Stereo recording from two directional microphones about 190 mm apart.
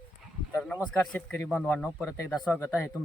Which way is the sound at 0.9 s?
10° left (ahead or behind).